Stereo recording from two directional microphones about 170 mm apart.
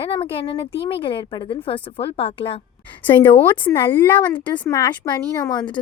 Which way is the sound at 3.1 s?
10° left (ahead or behind).